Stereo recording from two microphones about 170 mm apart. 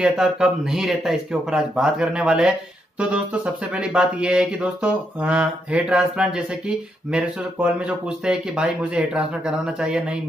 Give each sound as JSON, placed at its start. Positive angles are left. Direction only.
{"t": 0.0, "sound": "speech", "side_deg": -5}
{"t": 3.7, "sound": "speech", "side_deg": -5}